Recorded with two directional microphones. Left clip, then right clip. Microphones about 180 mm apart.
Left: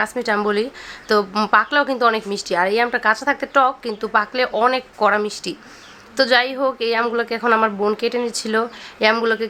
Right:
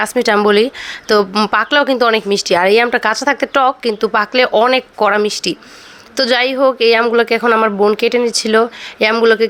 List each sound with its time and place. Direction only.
0.0 s a woman's voice: 45° right (ahead or behind)